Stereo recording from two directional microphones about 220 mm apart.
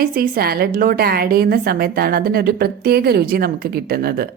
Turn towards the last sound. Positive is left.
turn(degrees=-45)  # may be behind; listen again after turning